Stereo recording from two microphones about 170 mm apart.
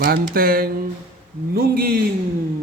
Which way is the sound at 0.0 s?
60° right (ahead or behind).